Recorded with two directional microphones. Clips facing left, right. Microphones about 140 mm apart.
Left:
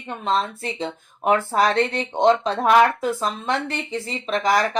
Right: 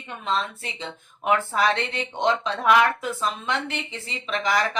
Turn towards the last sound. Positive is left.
turn(degrees=40)  # may be behind; listen again after turning